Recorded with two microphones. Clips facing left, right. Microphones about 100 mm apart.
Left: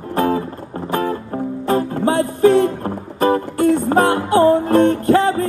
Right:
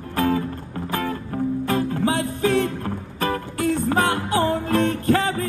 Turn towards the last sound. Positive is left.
turn(degrees=30)  # may be behind; listen again after turning